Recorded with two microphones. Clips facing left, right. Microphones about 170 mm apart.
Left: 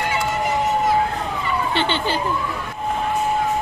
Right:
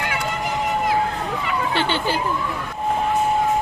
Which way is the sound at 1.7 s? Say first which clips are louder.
Even; 10° right (ahead or behind).